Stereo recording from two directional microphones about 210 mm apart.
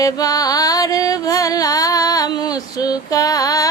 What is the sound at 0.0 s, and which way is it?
Music, 15° left (ahead or behind).